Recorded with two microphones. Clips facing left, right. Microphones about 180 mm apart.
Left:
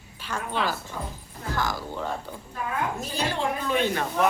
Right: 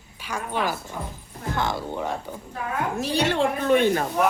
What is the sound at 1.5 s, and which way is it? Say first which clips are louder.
Speech: right 3 dB; 25° right (ahead or behind).